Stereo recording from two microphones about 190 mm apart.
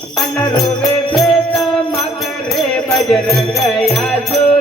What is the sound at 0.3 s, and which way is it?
Music, 5° left (ahead or behind).